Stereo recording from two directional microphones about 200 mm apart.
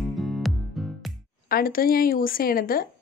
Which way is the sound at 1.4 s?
50° left (ahead or behind).